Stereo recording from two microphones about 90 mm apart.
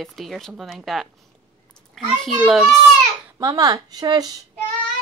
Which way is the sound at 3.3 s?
45° right (ahead or behind).